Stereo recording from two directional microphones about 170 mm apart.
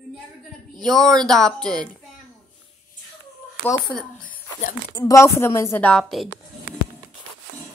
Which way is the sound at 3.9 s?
5° left (ahead or behind).